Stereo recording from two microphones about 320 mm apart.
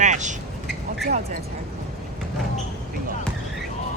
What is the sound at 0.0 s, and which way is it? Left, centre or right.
Vehicle, right.